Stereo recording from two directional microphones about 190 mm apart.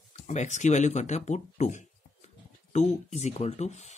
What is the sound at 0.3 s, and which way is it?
Speech, 40° left (ahead or behind).